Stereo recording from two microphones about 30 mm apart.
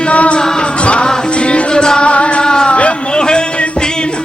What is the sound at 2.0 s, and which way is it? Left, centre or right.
Music, left.